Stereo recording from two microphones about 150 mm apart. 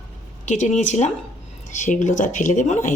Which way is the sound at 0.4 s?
55° left (ahead or behind).